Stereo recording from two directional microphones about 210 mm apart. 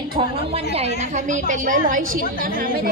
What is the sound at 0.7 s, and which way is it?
A woman's voice, 30° right (ahead or behind).